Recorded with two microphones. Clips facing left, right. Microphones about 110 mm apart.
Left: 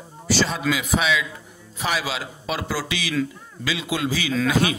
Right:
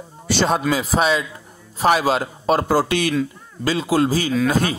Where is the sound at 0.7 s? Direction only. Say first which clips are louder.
Right 4 dB; 35° right (ahead or behind).